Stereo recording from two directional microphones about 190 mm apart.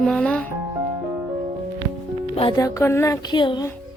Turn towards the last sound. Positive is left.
turn(degrees=25)  # may be behind; listen again after turning